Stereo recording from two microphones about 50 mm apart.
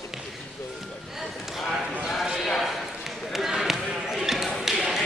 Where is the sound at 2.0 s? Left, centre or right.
Centre.